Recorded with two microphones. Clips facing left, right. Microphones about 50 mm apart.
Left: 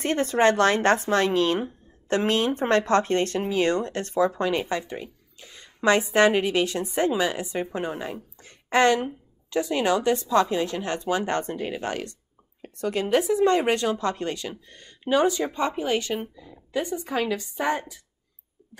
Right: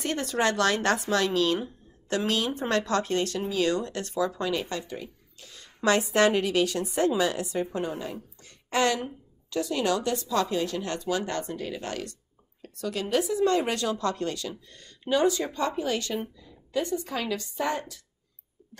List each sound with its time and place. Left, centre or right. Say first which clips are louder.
0.0 s speech: left 6 dB; left